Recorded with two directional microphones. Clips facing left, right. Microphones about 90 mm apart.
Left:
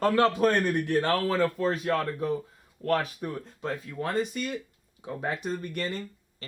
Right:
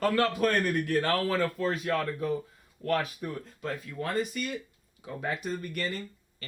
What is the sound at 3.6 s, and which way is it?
A man's voice, 30° left (ahead or behind).